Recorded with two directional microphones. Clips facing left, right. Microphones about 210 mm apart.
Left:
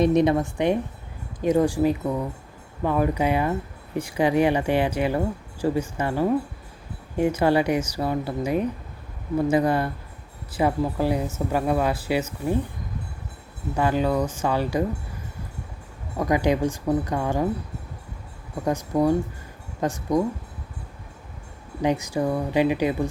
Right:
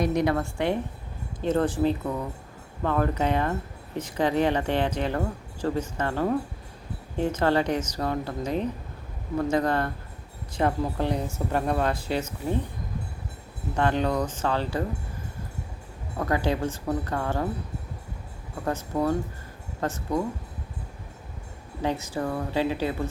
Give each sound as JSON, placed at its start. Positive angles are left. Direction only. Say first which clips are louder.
{"t": 0.0, "sound": "a woman's voice", "louder": "left 5 dB", "side_deg": 20}
{"t": 13.7, "sound": "speech", "louder": "left 2 dB", "side_deg": 5}
{"t": 16.1, "sound": "speech", "louder": "left 4 dB", "side_deg": 15}
{"t": 18.6, "sound": "speech", "louder": "left 5 dB", "side_deg": 15}
{"t": 21.8, "sound": "speech", "louder": "left 5 dB", "side_deg": 15}